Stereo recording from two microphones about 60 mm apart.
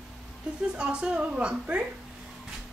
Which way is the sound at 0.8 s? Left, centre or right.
Centre.